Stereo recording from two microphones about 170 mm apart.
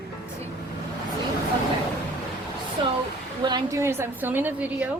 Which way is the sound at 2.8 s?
30° right (ahead or behind).